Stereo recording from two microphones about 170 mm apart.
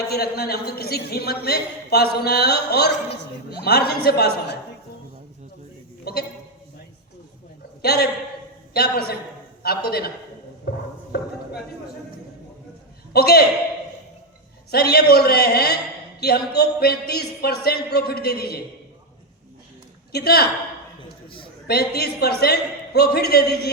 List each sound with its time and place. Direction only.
0.1 s a man's voice: 65° left (ahead or behind)
6.1 s a man's voice: 70° left (ahead or behind)
7.8 s a man's voice: 70° left (ahead or behind)
10.7 s a sound: 70° left (ahead or behind)
13.1 s a man's voice: 65° left (ahead or behind)
14.7 s a man's voice: 65° left (ahead or behind)
20.1 s a man's voice: 65° left (ahead or behind)
21.2 s a sound: 30° left (ahead or behind)
21.7 s a man's voice: 65° left (ahead or behind)